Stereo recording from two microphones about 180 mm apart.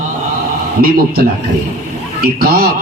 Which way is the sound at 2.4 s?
55° right (ahead or behind).